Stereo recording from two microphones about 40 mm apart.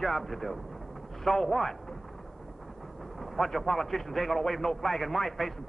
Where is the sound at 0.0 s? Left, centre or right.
Centre.